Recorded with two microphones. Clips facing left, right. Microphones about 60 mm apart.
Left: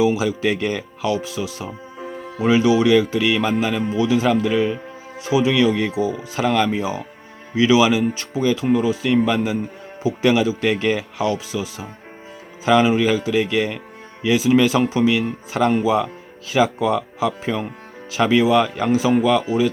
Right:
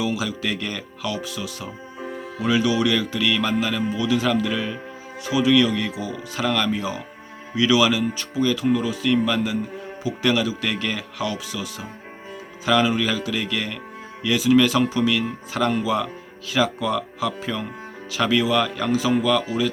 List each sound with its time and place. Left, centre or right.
0.0 s speech: left
2.0 s music: centre
2.4 s speech: left